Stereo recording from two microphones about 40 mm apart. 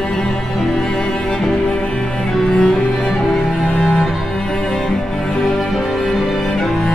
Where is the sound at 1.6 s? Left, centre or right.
Centre.